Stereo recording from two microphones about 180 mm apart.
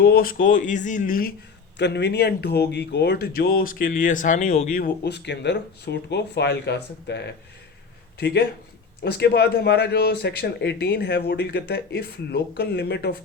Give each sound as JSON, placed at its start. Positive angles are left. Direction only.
{"t": 0.0, "sound": "speech", "side_deg": 55}
{"t": 0.4, "sound": "speech", "side_deg": 45}
{"t": 1.8, "sound": "speech", "side_deg": 70}
{"t": 4.8, "sound": "speech", "side_deg": 70}